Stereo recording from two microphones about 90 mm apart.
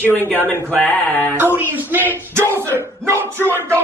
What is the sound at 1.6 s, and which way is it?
Speech, 20° right (ahead or behind).